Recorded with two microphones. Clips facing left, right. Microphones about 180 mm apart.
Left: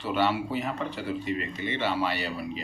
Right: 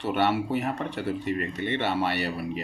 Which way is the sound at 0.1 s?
60° right (ahead or behind).